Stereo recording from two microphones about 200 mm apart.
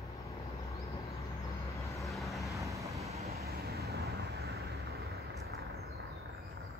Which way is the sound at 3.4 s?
50° right (ahead or behind).